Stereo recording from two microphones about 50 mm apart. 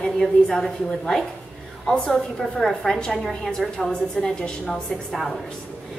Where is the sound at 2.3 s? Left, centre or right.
Centre.